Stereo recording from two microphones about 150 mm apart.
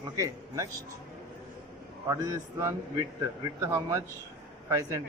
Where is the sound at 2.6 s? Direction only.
20° right (ahead or behind).